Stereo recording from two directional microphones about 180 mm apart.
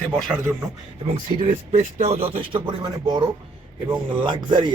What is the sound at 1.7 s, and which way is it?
Speech, 40° right (ahead or behind).